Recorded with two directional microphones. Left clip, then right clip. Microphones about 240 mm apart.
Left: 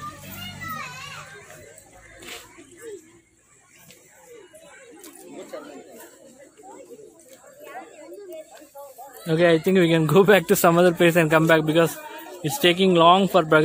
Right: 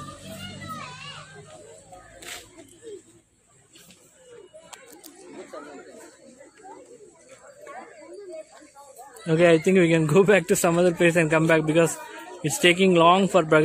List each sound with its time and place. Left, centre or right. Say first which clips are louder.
5.5 s chatter: left 3 dB; left
9.2 s speech: even; centre